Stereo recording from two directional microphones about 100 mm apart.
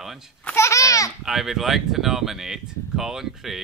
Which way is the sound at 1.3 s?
Centre (ahead or behind).